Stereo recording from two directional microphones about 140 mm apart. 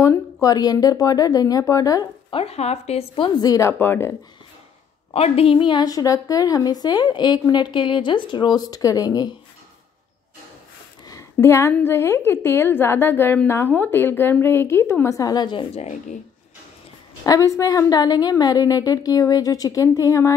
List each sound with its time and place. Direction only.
0.0 s a woman's voice: 20° left (ahead or behind)
2.3 s speech: 45° left (ahead or behind)
3.3 s a woman's voice: 25° left (ahead or behind)
5.1 s a woman's voice: 45° left (ahead or behind); by 9.3 s 25° left (ahead or behind)
11.1 s a woman's voice: 20° left (ahead or behind)
15.7 s speech: 55° left (ahead or behind)
17.2 s a woman's voice: 25° left (ahead or behind)